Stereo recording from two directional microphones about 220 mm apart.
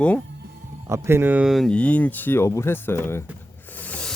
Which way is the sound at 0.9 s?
10° right (ahead or behind).